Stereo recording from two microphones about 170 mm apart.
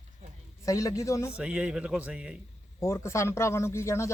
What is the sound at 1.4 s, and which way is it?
Speech, 5° right (ahead or behind).